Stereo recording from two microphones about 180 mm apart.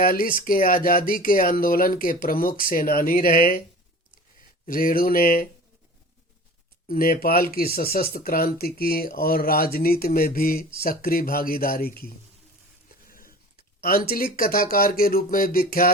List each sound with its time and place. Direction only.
0.0 s speech: 50° left (ahead or behind)
4.6 s speech: 50° left (ahead or behind)
6.8 s speech: 55° left (ahead or behind)
13.1 s a sound: 50° left (ahead or behind)
13.8 s speech: 55° left (ahead or behind)